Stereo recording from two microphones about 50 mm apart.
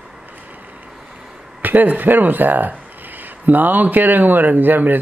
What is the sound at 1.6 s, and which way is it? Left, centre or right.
Speech, right.